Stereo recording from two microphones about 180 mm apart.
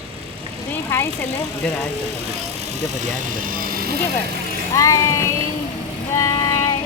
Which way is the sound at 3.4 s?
50° right (ahead or behind).